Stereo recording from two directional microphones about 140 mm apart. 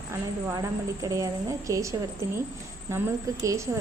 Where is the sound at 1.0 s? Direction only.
25° right (ahead or behind).